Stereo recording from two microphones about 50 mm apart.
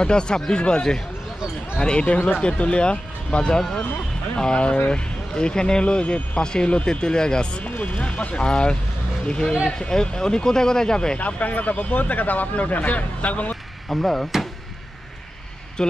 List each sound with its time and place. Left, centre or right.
0.0 s speech: centre
11.1 s speech: left
13.8 s speech: centre
15.8 s speech: centre